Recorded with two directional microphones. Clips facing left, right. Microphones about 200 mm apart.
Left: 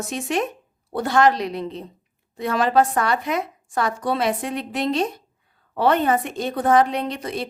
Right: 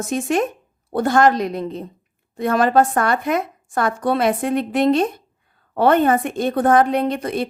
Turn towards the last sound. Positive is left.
turn(degrees=-55)  # may be behind; listen again after turning